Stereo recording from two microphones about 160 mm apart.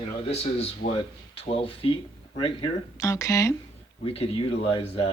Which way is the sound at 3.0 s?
20° left (ahead or behind).